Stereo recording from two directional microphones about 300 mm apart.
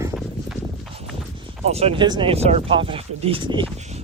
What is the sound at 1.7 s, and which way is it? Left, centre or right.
Speech, centre.